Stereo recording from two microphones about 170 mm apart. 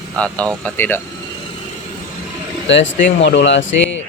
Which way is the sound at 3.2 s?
90° left.